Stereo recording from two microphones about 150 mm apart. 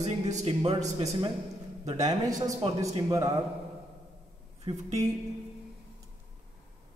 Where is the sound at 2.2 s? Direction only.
25° right (ahead or behind).